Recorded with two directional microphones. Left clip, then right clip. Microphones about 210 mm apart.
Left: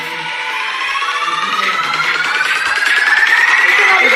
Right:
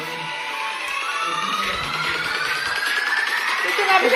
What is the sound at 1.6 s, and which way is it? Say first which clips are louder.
Music: left 9 dB; 35° left (ahead or behind).